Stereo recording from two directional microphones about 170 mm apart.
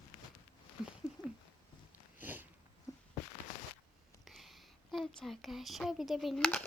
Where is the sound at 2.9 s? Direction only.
20° left (ahead or behind).